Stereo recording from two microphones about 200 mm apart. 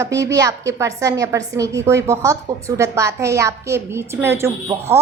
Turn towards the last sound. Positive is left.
turn(degrees=-10)  # may be behind; listen again after turning